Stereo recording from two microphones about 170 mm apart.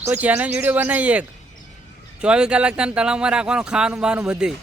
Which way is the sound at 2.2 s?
5° right (ahead or behind).